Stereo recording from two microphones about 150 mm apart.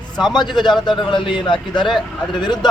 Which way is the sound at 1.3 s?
35° left (ahead or behind).